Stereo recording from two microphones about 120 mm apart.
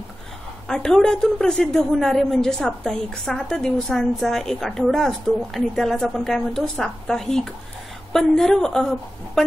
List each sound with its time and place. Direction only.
0.7 s a woman's voice: 5° left (ahead or behind)